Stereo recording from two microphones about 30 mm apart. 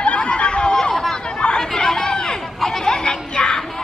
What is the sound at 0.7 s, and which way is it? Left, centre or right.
Chatter, left.